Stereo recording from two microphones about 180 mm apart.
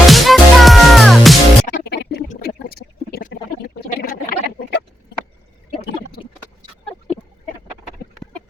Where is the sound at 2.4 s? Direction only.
60° left (ahead or behind).